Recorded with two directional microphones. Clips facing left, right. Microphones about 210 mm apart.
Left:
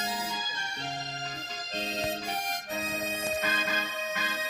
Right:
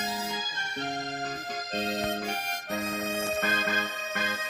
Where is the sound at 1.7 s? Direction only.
55° right (ahead or behind).